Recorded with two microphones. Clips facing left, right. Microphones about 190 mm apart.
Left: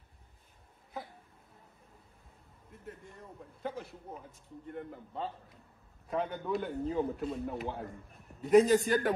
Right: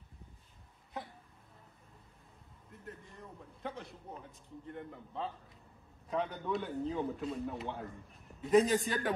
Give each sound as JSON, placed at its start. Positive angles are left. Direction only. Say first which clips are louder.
{"t": 2.7, "sound": "a man's voice", "louder": "left 2 dB", "side_deg": 0}